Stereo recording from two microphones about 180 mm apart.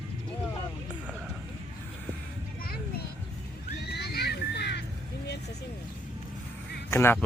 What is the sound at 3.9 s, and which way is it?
Music, 65° left (ahead or behind).